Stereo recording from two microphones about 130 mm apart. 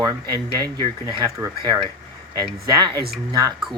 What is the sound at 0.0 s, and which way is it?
Speech, 30° right (ahead or behind).